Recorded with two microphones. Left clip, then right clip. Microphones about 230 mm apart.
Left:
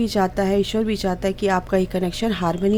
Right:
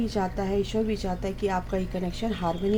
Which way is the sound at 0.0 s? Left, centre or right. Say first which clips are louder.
Left 8 dB; left.